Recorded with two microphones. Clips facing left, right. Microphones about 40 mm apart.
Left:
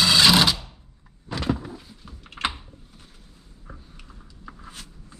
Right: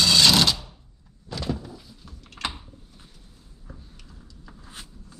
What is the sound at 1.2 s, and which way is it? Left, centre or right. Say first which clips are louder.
Door: left 4 dB; left.